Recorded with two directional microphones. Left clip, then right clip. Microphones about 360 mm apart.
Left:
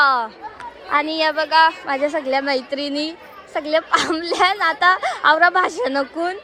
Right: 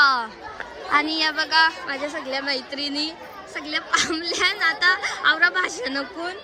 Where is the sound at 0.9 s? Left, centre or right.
Centre.